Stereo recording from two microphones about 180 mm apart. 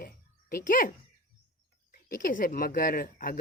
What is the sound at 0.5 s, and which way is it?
Speech, 50° left (ahead or behind).